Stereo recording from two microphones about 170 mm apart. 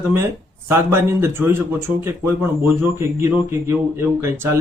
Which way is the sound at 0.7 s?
15° right (ahead or behind).